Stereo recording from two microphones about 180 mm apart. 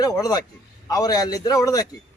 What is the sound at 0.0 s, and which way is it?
A man's voice, 20° left (ahead or behind).